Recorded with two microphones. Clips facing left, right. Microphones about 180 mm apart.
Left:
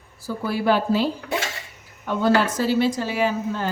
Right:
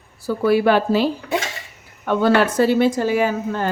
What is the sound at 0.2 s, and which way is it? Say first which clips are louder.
Speech: right 9 dB; 65° right (ahead or behind).